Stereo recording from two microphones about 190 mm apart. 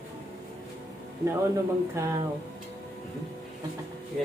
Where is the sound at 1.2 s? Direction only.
15° right (ahead or behind).